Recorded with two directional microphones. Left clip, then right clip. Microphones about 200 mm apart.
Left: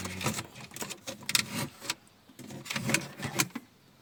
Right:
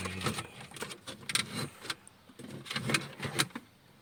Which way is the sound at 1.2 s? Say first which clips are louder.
Left 3 dB; 35° left (ahead or behind).